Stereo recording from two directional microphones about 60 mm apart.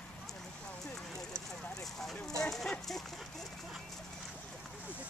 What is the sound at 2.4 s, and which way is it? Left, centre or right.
Clip-clop, centre.